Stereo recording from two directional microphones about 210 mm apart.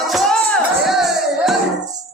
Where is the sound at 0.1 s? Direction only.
Centre (ahead or behind).